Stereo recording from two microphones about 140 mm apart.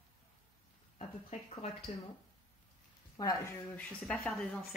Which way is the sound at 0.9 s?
50° left (ahead or behind).